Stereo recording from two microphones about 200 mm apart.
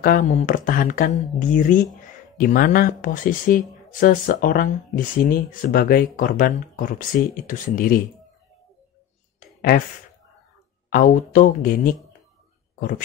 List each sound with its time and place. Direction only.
0.0 s speech: 45° left (ahead or behind)
9.7 s speech: 45° left (ahead or behind)